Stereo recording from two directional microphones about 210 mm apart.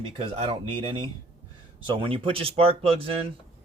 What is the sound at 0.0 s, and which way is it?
Speech, 25° right (ahead or behind).